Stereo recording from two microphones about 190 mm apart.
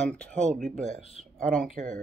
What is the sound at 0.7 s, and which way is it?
Speech, 40° right (ahead or behind).